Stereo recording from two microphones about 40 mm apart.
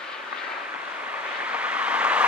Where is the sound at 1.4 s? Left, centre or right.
Right.